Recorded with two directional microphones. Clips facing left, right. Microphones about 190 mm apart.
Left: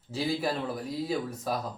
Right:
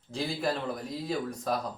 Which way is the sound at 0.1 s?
5° left (ahead or behind).